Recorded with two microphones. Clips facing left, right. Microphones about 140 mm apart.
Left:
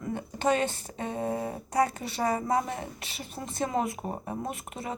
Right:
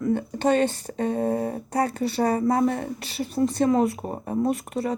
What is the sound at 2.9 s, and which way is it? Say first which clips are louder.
A woman's voice: right 14 dB; 35° right (ahead or behind).